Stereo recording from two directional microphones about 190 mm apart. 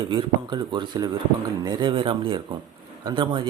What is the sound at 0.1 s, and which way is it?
Speech, 25° right (ahead or behind).